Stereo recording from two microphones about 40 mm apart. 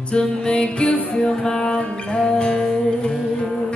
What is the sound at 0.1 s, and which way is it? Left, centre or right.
Music, left.